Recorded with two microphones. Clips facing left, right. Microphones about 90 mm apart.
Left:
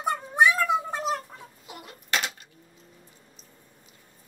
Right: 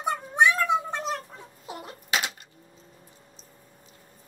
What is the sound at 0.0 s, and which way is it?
Cat, centre (ahead or behind).